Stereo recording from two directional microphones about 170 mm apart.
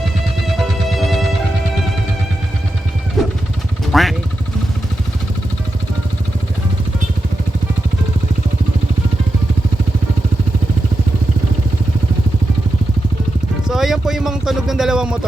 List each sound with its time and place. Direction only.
0.9 s music: centre (ahead or behind)
3.2 s vehicle: centre (ahead or behind)
13.7 s a sound: centre (ahead or behind)